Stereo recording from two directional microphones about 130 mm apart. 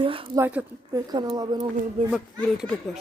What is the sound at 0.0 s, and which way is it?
Speech, 45° right (ahead or behind).